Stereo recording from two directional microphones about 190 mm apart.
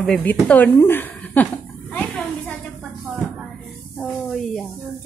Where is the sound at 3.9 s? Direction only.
Centre (ahead or behind).